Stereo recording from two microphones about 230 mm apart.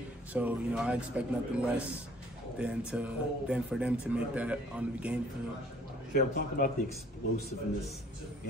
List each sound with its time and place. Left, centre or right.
0.3 s speech: centre
6.1 s speech: left